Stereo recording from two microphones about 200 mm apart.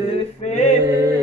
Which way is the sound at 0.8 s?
15° right (ahead or behind).